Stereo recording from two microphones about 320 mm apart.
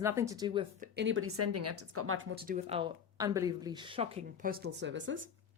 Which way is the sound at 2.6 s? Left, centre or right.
Centre.